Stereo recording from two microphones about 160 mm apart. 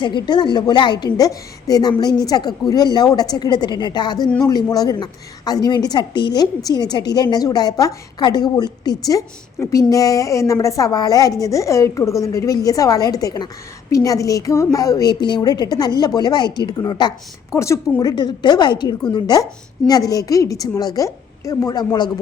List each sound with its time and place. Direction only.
0.0 s a woman's voice: 30° left (ahead or behind)